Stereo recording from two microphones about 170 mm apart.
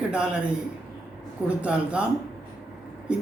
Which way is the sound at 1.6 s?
5° right (ahead or behind).